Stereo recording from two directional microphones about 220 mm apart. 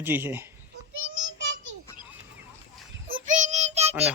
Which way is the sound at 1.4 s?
55° right (ahead or behind).